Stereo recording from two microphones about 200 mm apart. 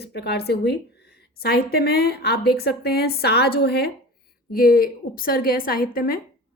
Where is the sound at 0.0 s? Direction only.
55° left (ahead or behind).